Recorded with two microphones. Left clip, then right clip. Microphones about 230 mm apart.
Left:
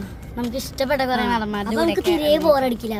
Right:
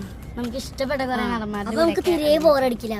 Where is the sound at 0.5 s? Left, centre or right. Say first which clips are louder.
Left 4 dB; left.